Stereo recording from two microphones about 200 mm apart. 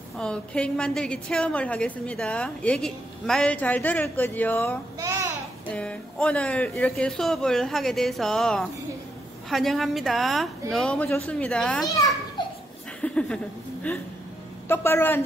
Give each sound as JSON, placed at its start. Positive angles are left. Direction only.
{"t": 0.2, "sound": "a woman's voice", "side_deg": 5}
{"t": 4.9, "sound": "a sound", "side_deg": -15}
{"t": 5.7, "sound": "a woman's voice", "side_deg": 5}
{"t": 12.4, "sound": "laughter", "side_deg": 20}
{"t": 13.0, "sound": "speech", "side_deg": 5}
{"t": 14.7, "sound": "a man's voice", "side_deg": 10}